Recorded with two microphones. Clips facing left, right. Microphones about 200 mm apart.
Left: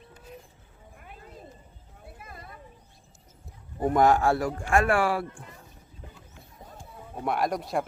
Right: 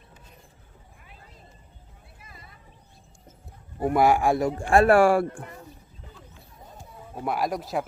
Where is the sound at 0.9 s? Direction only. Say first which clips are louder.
Left 8 dB; 50° left (ahead or behind).